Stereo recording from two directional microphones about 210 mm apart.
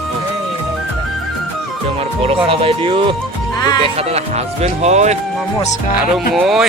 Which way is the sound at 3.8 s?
30° right (ahead or behind).